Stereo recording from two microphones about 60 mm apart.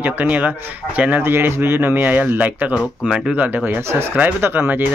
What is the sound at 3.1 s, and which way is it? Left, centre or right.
Speech, centre.